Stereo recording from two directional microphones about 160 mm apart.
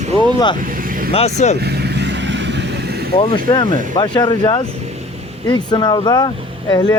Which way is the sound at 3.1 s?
30° left (ahead or behind).